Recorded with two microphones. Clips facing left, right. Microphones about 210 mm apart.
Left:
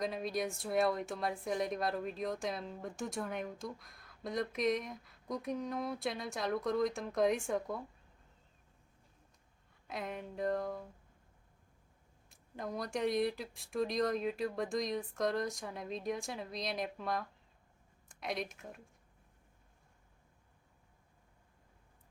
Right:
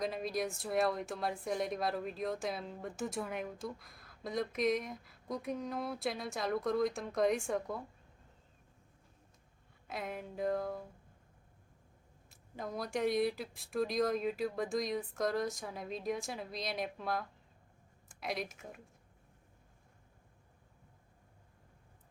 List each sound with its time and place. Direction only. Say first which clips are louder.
0.0 s a woman's voice: even; centre (ahead or behind)
9.8 s a woman's voice: even; centre (ahead or behind)
12.3 s a woman's voice: even; centre (ahead or behind)